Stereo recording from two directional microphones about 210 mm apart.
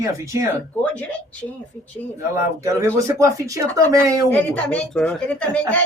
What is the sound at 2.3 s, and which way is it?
Speech, 15° right (ahead or behind).